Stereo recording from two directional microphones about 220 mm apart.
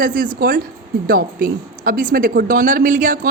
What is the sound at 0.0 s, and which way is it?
Speech, 40° right (ahead or behind).